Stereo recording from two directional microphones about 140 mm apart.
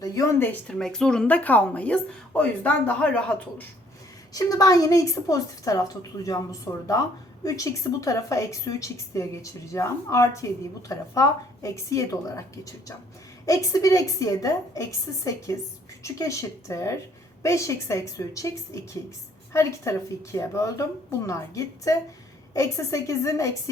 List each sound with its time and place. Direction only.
0.0 s speech: 25° left (ahead or behind)
0.7 s speech: 5° left (ahead or behind)
4.4 s a woman's voice: 25° left (ahead or behind)